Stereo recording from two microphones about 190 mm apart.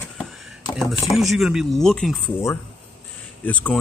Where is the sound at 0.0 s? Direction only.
Centre (ahead or behind).